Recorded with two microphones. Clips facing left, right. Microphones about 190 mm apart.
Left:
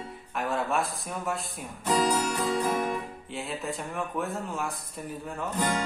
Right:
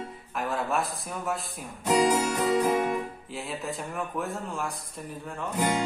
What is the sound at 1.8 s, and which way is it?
Music, 10° right (ahead or behind).